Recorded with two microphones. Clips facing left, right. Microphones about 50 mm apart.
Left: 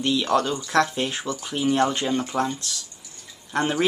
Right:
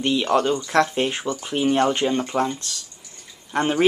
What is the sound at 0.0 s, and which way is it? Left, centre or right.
Speech, right.